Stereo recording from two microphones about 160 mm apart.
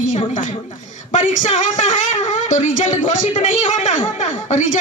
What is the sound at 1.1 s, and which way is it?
A woman's voice, 50° left (ahead or behind).